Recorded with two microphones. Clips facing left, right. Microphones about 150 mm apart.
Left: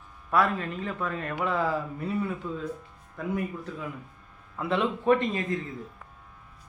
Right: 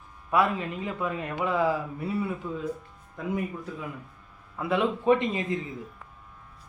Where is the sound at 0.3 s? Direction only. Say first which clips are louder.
Right 1 dB; 15° right (ahead or behind).